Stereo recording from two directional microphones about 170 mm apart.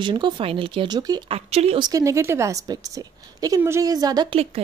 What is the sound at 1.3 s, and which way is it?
A woman's voice, 35° right (ahead or behind).